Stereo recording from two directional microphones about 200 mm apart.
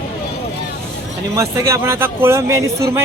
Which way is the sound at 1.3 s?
15° right (ahead or behind).